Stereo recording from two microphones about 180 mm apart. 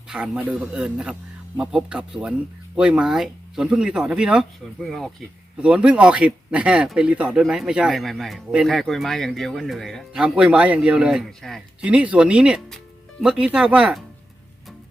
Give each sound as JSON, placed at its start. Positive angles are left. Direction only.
{"t": 0.1, "sound": "speech", "side_deg": -5}